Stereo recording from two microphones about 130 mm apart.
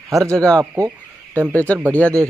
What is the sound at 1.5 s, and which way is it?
Speech, 10° left (ahead or behind).